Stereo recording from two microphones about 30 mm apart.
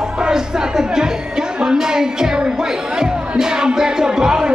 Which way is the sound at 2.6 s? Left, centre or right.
Right.